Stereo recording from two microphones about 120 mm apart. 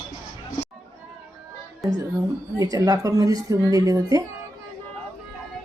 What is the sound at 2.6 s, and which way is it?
A woman's voice, 30° right (ahead or behind).